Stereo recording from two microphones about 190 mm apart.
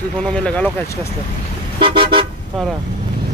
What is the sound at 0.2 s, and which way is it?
Speech, 5° left (ahead or behind).